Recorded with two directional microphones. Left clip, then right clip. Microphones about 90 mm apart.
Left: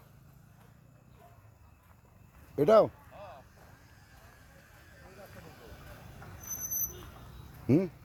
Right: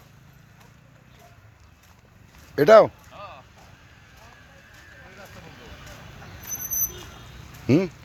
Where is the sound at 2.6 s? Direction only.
15° left (ahead or behind).